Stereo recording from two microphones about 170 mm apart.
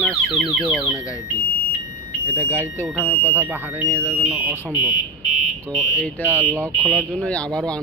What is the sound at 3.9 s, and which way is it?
Speech, 10° left (ahead or behind).